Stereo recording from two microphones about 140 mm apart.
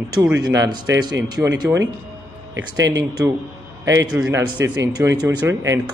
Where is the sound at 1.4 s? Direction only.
20° right (ahead or behind).